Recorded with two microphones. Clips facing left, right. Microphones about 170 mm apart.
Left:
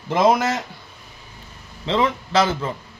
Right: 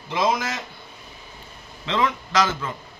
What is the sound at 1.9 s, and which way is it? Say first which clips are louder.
Speech: left 3 dB; 30° left (ahead or behind).